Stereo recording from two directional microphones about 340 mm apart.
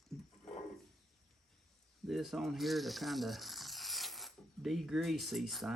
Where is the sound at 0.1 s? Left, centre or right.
Centre.